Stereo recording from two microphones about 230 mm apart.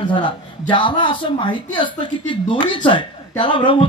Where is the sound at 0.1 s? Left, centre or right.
Left.